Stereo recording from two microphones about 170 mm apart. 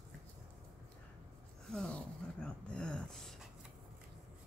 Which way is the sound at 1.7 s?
5° left (ahead or behind).